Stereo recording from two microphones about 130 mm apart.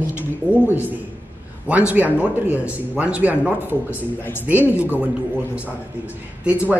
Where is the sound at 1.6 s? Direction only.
10° right (ahead or behind).